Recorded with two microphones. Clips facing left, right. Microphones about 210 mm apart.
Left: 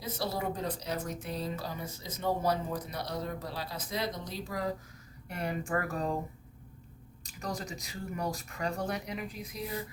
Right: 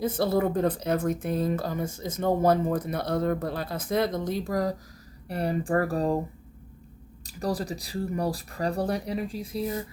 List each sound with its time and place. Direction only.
0.0 s speech: 50° right (ahead or behind)
5.3 s speech: 35° right (ahead or behind)
7.3 s speech: 35° right (ahead or behind)